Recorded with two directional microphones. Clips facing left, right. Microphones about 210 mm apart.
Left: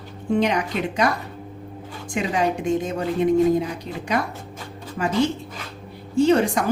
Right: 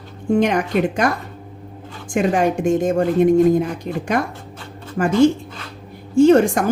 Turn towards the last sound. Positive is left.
turn(degrees=-50)  # may be behind; listen again after turning